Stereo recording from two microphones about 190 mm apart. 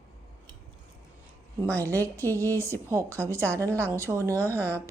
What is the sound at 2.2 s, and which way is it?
Speech, 10° left (ahead or behind).